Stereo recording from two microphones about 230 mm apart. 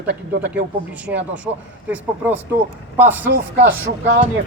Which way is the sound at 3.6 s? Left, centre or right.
Right.